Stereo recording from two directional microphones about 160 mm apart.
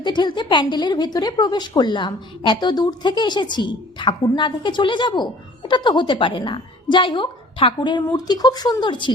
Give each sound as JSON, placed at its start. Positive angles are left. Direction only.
{"t": 0.0, "sound": "a woman's voice", "side_deg": 30}